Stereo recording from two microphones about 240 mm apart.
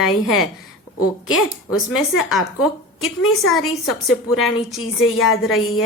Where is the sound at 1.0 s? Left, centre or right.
Left.